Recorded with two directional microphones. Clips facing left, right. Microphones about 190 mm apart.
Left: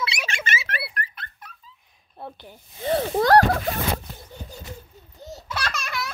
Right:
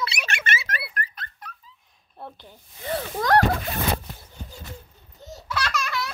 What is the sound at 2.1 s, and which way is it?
Speech, 5° left (ahead or behind).